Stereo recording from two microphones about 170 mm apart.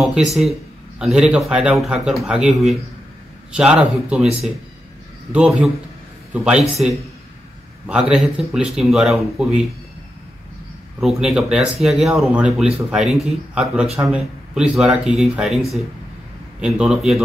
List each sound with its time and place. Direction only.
0.0 s a man's voice: centre (ahead or behind)
11.0 s speech: centre (ahead or behind)
16.6 s speech: 5° right (ahead or behind)